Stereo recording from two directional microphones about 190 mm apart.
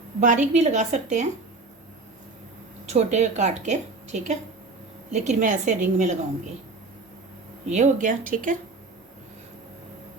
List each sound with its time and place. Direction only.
0.2 s a woman's voice: 40° right (ahead or behind)
2.9 s a woman's voice: 35° right (ahead or behind)
7.7 s a woman's voice: 40° right (ahead or behind)